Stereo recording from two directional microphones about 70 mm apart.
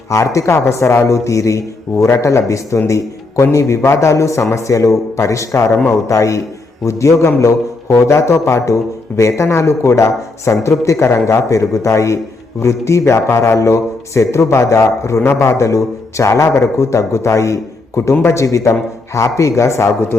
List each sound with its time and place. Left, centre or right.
0.1 s a man's voice: left